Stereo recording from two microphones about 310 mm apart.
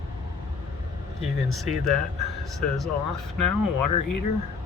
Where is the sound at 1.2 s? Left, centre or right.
Centre.